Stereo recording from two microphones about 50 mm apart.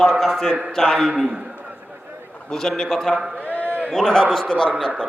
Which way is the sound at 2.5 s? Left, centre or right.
Centre.